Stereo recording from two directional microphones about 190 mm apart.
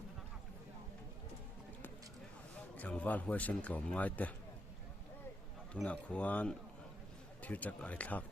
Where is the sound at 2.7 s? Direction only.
5° left (ahead or behind).